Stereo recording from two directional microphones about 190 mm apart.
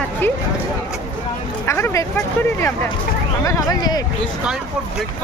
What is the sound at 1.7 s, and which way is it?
Speech, 15° left (ahead or behind).